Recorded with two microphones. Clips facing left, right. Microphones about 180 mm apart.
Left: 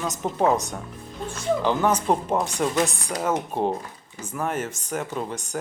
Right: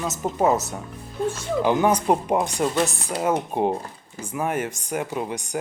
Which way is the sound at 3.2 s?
10° right (ahead or behind).